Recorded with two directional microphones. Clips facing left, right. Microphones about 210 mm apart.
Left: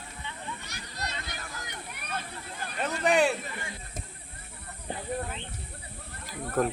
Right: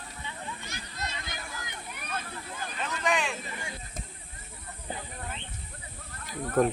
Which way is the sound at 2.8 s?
35° left (ahead or behind).